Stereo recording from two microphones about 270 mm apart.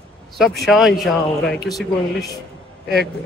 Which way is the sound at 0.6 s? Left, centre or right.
Centre.